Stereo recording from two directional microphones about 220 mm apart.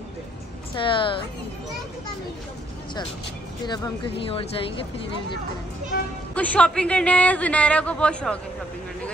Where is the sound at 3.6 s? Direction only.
20° left (ahead or behind).